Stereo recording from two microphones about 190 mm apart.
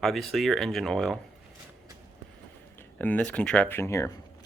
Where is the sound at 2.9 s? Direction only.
10° left (ahead or behind).